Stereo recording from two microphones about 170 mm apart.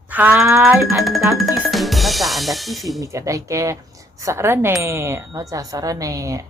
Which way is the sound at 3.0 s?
20° right (ahead or behind).